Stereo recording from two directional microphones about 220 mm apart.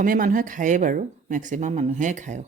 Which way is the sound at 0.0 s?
40° right (ahead or behind).